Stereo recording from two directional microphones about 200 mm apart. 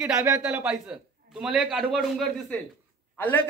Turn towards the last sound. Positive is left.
turn(degrees=10)  # may be behind; listen again after turning